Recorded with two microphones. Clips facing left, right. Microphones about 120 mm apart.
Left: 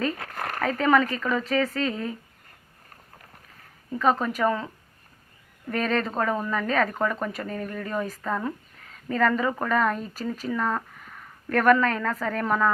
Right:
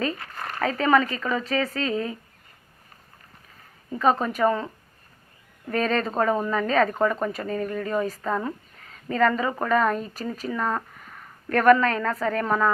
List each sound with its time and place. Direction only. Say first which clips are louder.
0.2 s a sound: left 2 dB; 75° left (ahead or behind)
0.6 s speech: right 1 dB; centre (ahead or behind)
3.9 s a woman's voice: right 1 dB; 15° right (ahead or behind)
5.6 s speech: right 2 dB; centre (ahead or behind)
6.1 s a woman's voice: right 3 dB; 10° right (ahead or behind)